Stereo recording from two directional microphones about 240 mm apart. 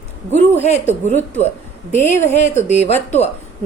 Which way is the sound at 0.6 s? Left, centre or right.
Left.